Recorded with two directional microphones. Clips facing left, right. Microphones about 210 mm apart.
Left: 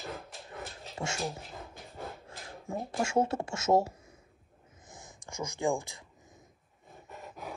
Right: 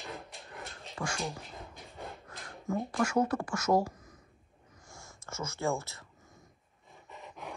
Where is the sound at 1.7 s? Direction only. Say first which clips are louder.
Left 3 dB; centre (ahead or behind).